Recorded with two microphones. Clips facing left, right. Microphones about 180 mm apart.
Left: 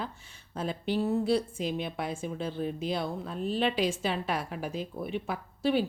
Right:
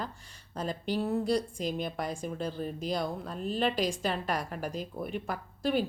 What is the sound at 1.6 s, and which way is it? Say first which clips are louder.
Speech: left 1 dB; 40° right (ahead or behind).